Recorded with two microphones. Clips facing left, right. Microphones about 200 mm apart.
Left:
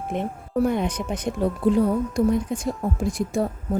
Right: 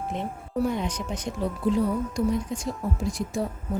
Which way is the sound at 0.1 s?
55° left (ahead or behind).